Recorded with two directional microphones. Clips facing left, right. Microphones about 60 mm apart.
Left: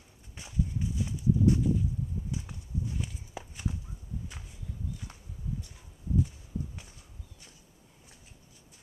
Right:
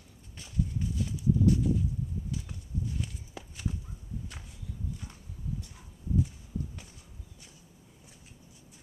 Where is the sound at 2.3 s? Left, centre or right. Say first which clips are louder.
Even; left.